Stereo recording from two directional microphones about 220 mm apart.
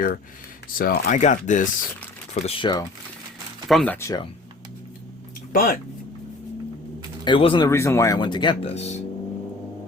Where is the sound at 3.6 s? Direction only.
5° left (ahead or behind).